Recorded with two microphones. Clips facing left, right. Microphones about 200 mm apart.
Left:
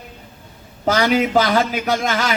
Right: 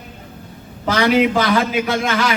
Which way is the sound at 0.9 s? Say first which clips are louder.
Right 2 dB; 40° left (ahead or behind).